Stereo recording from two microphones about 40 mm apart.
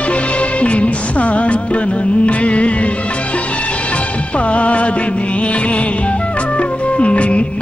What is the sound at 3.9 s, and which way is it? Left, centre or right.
Music, left.